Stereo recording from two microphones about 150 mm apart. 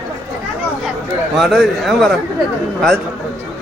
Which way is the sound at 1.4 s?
Centre (ahead or behind).